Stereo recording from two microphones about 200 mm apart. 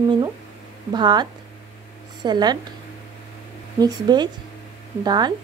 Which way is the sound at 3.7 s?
20° right (ahead or behind).